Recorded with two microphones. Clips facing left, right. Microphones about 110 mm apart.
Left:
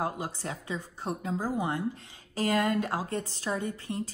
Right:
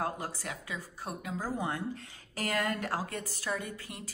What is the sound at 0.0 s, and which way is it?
A woman's voice, 20° left (ahead or behind).